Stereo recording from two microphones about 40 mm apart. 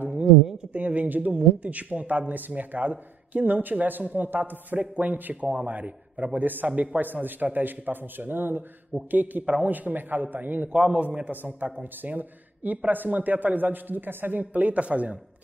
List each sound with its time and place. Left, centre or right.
0.7 s a man's voice: right
5.3 s speech: right
6.3 s a man's voice: right
6.7 s a man's voice: right
7.0 s a man's voice: right
9.1 s a man's voice: right
10.7 s a man's voice: right
11.2 s a man's voice: right
14.4 s speech: right